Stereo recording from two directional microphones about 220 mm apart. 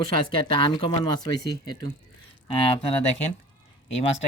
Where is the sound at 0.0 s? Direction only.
20° left (ahead or behind).